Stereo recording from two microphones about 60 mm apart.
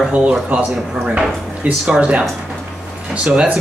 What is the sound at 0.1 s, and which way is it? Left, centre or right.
Speech, right.